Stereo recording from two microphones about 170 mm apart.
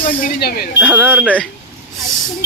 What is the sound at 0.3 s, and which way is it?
Speech, 70° left (ahead or behind).